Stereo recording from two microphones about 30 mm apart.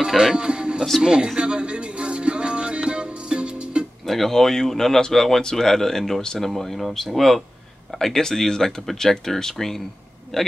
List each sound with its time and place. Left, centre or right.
0.0 s speech: centre
0.4 s music: right
4.1 s speech: centre
6.5 s speech: centre
8.0 s speech: centre